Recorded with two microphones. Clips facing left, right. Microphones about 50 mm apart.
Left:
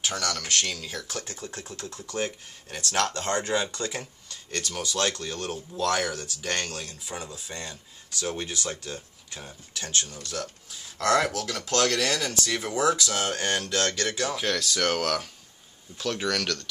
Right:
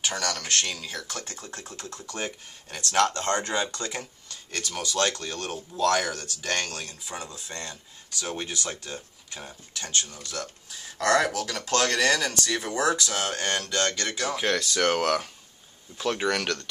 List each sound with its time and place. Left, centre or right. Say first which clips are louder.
0.0 s speech: even; centre